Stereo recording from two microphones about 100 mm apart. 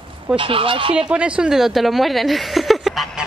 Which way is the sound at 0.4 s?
60° right (ahead or behind).